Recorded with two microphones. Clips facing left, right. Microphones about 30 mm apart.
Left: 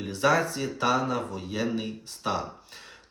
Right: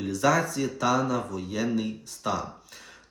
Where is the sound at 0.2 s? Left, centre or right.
Left.